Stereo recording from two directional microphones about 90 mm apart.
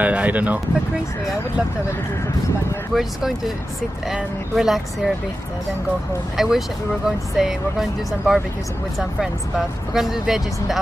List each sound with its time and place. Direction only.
0.0 s speech: 15° right (ahead or behind)
2.9 s speech: 5° right (ahead or behind)
6.3 s speech: 5° right (ahead or behind)